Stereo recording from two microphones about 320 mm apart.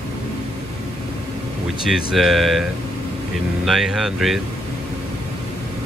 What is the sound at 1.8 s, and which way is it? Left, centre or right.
Speech, centre.